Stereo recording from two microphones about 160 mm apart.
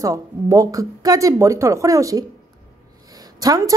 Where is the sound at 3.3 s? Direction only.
20° right (ahead or behind).